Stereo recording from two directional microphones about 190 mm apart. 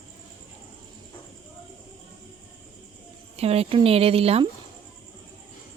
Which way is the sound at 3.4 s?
30° right (ahead or behind).